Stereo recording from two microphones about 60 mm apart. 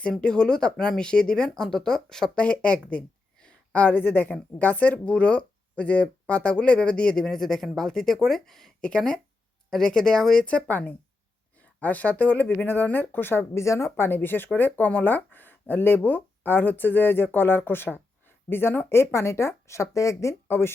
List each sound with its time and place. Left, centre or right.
0.1 s speech: centre
2.9 s a sound: centre
3.8 s speech: left; by 10.4 s centre
10.4 s speech: left
13.4 s speech: left
13.9 s speech: left
20.5 s speech: left